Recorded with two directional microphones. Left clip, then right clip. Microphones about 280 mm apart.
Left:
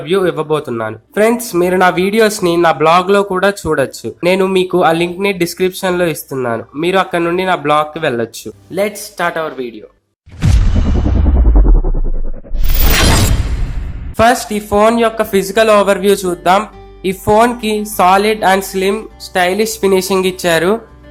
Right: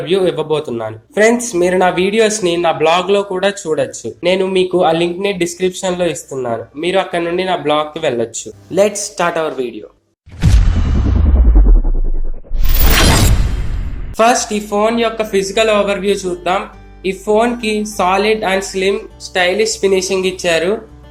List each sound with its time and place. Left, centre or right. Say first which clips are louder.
0.0 s speech: even; left
2.1 s a man's voice: left 1 dB; left
2.4 s speech: left 3 dB; left
8.7 s speech: right 4 dB; centre
10.8 s music: left 3 dB; centre
12.8 s shatter: even; centre
14.2 s speech: left 1 dB; left